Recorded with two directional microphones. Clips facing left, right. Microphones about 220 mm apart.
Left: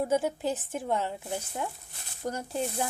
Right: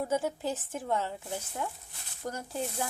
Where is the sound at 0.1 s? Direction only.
15° left (ahead or behind).